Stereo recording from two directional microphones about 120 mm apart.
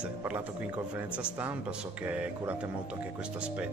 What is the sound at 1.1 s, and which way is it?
Speech, 10° right (ahead or behind).